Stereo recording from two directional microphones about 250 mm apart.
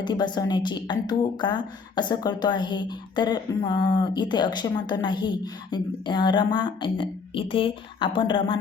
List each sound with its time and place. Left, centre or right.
0.0 s a woman's voice: centre